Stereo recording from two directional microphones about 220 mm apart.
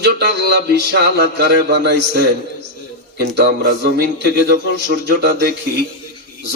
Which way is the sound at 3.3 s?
50° right (ahead or behind).